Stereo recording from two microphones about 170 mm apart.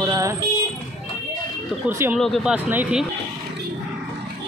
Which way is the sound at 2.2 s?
Centre (ahead or behind).